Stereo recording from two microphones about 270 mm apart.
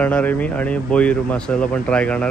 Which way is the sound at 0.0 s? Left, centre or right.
Centre.